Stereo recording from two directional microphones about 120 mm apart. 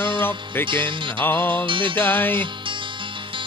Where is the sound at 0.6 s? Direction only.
45° right (ahead or behind).